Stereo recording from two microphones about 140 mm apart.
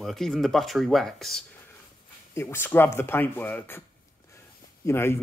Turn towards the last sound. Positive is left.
turn(degrees=15)  # may be behind; listen again after turning